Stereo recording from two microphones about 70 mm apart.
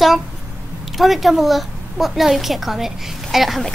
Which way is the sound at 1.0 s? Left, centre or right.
Centre.